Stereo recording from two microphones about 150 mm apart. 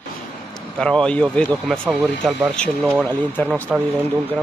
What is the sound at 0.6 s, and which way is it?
Speech, 5° left (ahead or behind).